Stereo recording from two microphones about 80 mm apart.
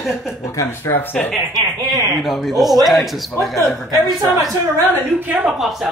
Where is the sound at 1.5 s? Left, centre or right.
Right.